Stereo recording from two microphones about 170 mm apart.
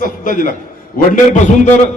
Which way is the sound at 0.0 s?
50° left (ahead or behind).